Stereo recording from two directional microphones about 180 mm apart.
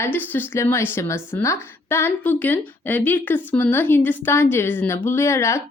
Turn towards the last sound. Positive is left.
turn(degrees=15)  # may be behind; listen again after turning